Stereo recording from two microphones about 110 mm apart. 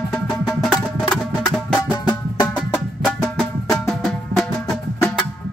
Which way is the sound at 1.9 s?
40° left (ahead or behind).